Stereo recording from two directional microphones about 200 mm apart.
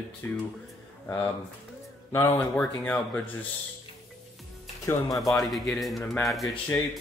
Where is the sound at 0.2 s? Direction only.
10° left (ahead or behind).